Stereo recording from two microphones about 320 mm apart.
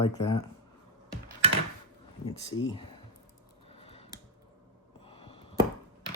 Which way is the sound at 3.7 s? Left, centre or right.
Centre.